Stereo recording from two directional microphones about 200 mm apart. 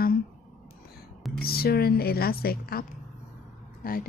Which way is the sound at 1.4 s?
50° left (ahead or behind).